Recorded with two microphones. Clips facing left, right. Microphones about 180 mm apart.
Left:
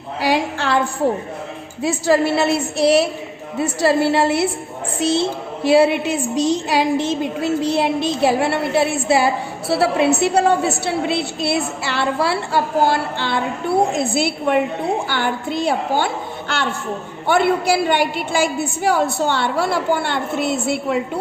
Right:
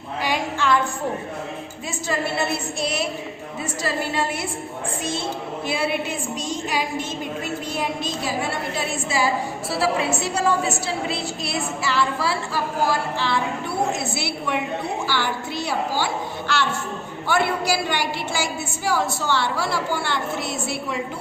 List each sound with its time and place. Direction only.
0.2 s a woman's voice: 75° left (ahead or behind)
1.8 s a woman's voice: 75° left (ahead or behind)
5.6 s a woman's voice: 90° left; by 21.0 s 60° left (ahead or behind)